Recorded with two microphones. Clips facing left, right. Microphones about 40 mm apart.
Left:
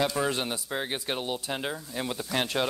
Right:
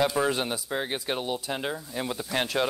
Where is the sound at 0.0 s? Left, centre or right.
Centre.